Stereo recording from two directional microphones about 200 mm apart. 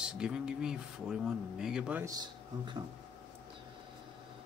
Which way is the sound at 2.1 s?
20° right (ahead or behind).